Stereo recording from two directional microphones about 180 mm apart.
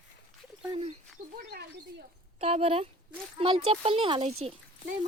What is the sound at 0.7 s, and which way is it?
Speech, 30° right (ahead or behind).